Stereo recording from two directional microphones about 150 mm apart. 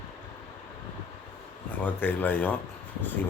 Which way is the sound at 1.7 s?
10° left (ahead or behind).